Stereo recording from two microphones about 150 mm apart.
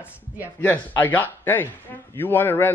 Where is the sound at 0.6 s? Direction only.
10° left (ahead or behind).